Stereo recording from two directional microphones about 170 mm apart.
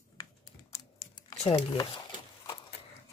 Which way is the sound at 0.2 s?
20° left (ahead or behind).